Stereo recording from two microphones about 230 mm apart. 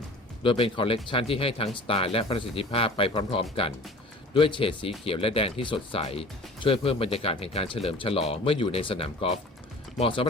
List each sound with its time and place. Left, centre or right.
0.4 s speech: left